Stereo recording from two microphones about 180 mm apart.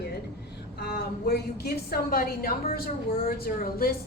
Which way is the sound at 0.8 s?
65° left (ahead or behind).